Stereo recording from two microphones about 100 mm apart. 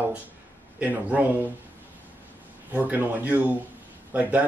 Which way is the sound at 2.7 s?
20° right (ahead or behind).